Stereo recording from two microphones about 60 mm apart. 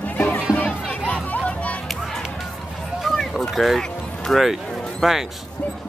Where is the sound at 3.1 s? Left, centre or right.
Centre.